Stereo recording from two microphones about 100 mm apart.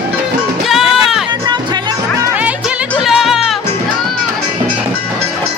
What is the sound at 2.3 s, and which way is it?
Music, 15° right (ahead or behind).